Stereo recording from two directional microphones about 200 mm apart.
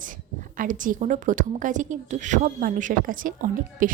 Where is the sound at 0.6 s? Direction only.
40° right (ahead or behind).